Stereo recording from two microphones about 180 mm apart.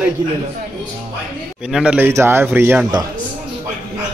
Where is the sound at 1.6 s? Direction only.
5° right (ahead or behind).